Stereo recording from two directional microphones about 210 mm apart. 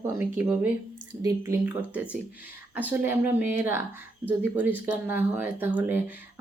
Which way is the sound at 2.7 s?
10° right (ahead or behind).